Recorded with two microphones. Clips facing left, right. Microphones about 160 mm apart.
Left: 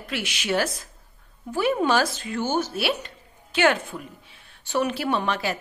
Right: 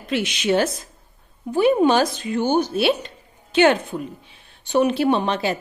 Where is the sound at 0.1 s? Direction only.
20° right (ahead or behind).